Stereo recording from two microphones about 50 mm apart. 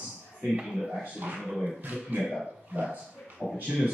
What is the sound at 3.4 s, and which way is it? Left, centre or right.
Speech, centre.